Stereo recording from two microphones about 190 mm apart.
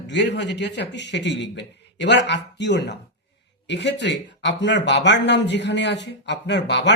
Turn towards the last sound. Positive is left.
turn(degrees=65)  # may be behind; listen again after turning